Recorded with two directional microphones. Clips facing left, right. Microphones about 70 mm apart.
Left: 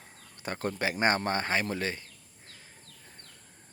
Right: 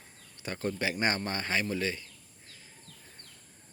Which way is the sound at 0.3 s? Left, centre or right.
Left.